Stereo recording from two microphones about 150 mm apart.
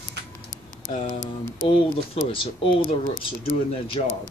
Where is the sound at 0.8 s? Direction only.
25° right (ahead or behind).